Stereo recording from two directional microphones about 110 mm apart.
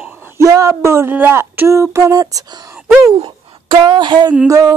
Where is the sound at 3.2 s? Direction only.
45° right (ahead or behind).